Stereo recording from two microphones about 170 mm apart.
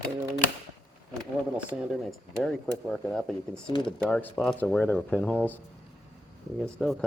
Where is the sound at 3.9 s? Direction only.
5° left (ahead or behind).